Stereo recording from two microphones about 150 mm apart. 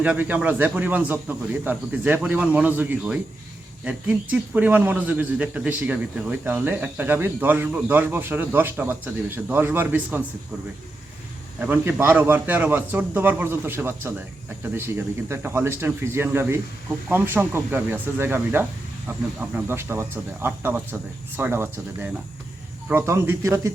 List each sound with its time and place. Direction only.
0.0 s speech: 10° right (ahead or behind)
11.6 s speech: 10° right (ahead or behind)